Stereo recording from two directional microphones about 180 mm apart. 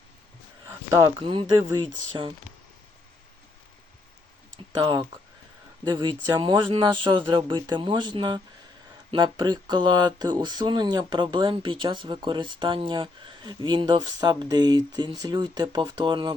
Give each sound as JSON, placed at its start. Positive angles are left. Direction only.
{"t": 0.7, "sound": "a sound", "side_deg": -15}
{"t": 1.3, "sound": "speech", "side_deg": -30}
{"t": 4.8, "sound": "speech", "side_deg": -25}